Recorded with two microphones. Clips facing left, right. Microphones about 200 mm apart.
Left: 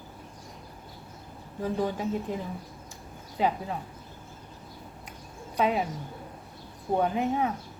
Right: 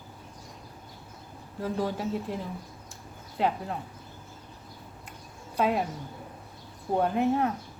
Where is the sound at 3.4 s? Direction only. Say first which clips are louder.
Left 1 dB; centre (ahead or behind).